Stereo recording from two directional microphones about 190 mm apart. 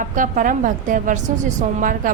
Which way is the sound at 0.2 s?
45° right (ahead or behind).